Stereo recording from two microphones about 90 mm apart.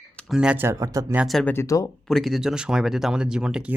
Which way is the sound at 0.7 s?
40° right (ahead or behind).